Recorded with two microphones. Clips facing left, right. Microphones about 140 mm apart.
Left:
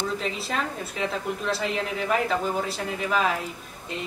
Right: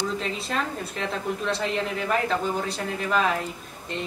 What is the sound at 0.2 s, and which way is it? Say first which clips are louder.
A woman's voice: even; centre (ahead or behind).